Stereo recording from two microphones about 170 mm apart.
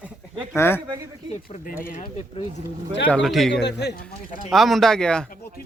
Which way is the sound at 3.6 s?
80° left.